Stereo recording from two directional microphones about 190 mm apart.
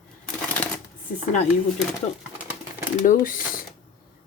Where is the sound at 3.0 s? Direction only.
40° left (ahead or behind).